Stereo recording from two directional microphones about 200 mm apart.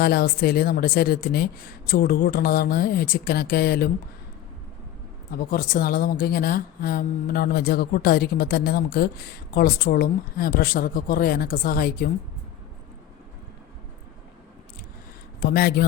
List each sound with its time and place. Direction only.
0.0 s a woman's voice: 50° left (ahead or behind)
5.5 s a woman's voice: 45° left (ahead or behind)
15.4 s a woman's voice: 50° left (ahead or behind)